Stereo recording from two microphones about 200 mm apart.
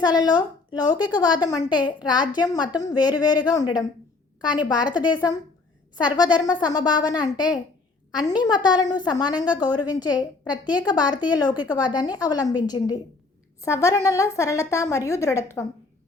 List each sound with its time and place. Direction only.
0.0 s a woman's voice: 20° left (ahead or behind)
4.8 s a woman's voice: 5° right (ahead or behind)
6.0 s a woman's voice: 20° left (ahead or behind)